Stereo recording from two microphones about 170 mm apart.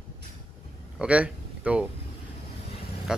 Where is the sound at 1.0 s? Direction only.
5° right (ahead or behind).